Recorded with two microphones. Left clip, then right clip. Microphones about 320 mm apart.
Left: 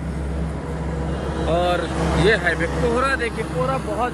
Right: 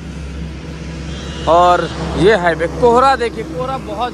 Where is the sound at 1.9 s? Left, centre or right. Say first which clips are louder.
Right 1 dB; left.